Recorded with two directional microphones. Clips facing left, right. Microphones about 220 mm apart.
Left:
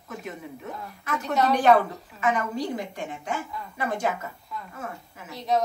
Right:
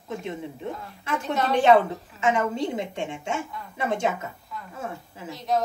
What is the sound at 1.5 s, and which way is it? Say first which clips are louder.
Speech: right 3 dB; 25° right (ahead or behind).